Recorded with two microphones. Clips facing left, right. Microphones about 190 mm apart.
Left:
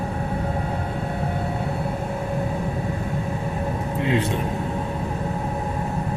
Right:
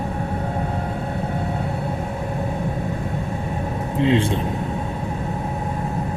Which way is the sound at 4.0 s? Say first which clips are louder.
Right 5 dB; 25° right (ahead or behind).